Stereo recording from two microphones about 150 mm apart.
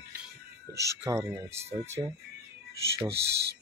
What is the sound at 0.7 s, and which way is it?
Speech, 20° right (ahead or behind).